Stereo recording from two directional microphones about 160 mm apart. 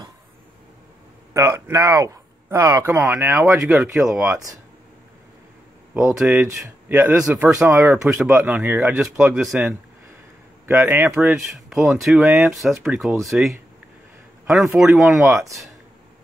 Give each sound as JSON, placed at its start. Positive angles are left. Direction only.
{"t": 1.3, "sound": "speech", "side_deg": -20}
{"t": 6.1, "sound": "speech", "side_deg": -5}
{"t": 6.9, "sound": "speech", "side_deg": -15}
{"t": 14.8, "sound": "speech", "side_deg": 0}